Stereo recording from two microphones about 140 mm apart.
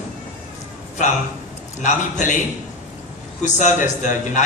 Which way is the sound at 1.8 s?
60° left (ahead or behind).